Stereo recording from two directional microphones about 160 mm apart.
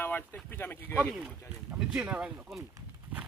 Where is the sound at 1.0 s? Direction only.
5° right (ahead or behind).